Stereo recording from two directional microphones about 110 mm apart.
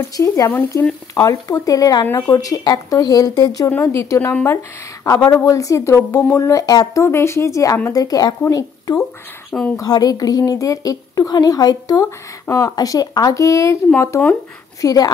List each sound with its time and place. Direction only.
0.2 s speech: 20° left (ahead or behind)
1.2 s a woman's voice: 35° left (ahead or behind)
4.3 s speech: 15° left (ahead or behind)
5.0 s a woman's voice: 30° left (ahead or behind)